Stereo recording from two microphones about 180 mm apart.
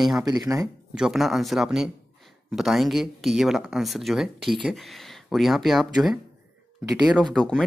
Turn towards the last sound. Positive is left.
turn(degrees=5)  # may be behind; listen again after turning